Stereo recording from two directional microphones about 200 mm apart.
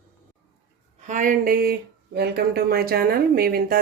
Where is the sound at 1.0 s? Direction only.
40° right (ahead or behind).